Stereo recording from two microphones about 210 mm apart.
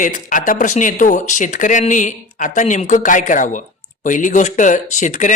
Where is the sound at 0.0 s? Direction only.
40° left (ahead or behind).